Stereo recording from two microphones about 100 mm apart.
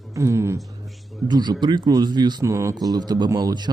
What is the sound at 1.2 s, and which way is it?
Speech, 45° right (ahead or behind).